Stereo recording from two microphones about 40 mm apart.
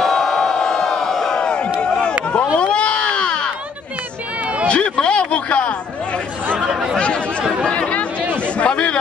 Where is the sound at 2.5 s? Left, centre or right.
Left.